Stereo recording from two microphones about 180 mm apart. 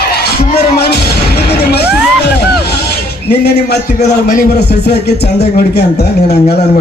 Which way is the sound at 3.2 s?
65° left (ahead or behind).